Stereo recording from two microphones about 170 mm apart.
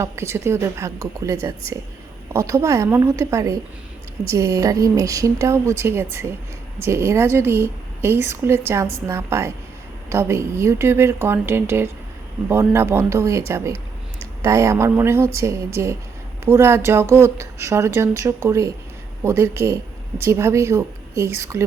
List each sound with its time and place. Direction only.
0.0 s a woman's voice: 15° right (ahead or behind)
14.4 s a woman's voice: 20° right (ahead or behind)